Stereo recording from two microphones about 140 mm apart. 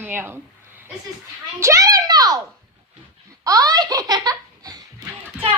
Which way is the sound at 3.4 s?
25° right (ahead or behind).